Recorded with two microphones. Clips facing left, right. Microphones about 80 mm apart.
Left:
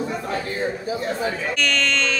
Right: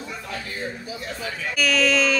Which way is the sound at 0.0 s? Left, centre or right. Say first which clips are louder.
Left 8 dB; left.